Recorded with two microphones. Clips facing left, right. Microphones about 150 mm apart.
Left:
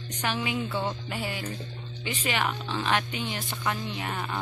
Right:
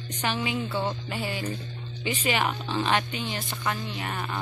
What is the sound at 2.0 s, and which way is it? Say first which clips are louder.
Speech: right 3 dB; 5° right (ahead or behind).